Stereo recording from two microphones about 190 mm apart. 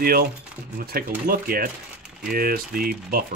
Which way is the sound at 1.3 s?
50° right (ahead or behind).